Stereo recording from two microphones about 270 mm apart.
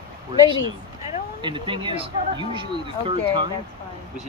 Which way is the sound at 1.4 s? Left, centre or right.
Centre.